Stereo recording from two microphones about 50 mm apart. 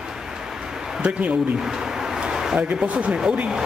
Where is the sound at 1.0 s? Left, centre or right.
Right.